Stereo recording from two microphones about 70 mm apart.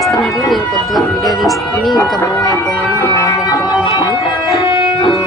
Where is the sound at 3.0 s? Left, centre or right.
Left.